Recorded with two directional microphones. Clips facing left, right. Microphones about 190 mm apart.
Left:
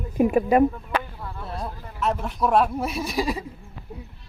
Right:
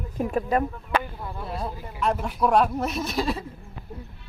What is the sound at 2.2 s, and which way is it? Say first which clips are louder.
Speech: even; centre (ahead or behind).